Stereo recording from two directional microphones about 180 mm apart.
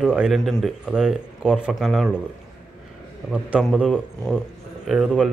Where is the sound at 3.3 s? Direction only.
5° right (ahead or behind).